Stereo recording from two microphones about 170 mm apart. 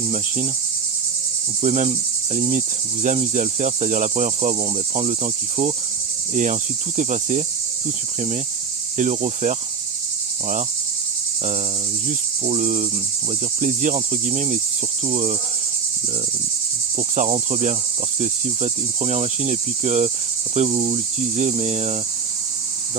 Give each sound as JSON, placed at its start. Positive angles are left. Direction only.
{"t": 1.6, "sound": "cricket", "side_deg": -40}
{"t": 9.0, "sound": "cricket", "side_deg": -45}
{"t": 12.0, "sound": "cricket", "side_deg": -45}
{"t": 17.2, "sound": "cricket", "side_deg": -40}